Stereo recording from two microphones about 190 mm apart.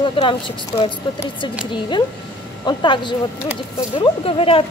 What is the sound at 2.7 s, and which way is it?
A woman's voice, 25° left (ahead or behind).